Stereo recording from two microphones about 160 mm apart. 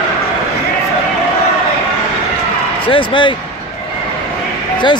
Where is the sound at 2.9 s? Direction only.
30° left (ahead or behind).